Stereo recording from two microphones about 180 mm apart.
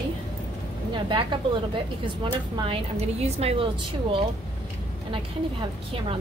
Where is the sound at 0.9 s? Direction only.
25° right (ahead or behind).